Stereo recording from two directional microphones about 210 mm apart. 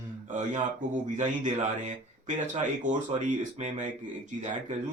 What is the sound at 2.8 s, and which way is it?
Speech, 35° right (ahead or behind).